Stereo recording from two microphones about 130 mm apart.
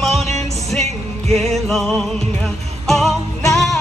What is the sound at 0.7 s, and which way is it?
Music, 10° left (ahead or behind).